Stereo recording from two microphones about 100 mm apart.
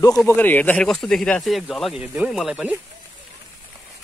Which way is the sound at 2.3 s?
5° right (ahead or behind).